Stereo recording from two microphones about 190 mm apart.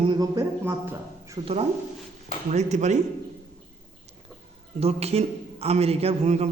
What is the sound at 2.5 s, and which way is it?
Speech, 35° right (ahead or behind).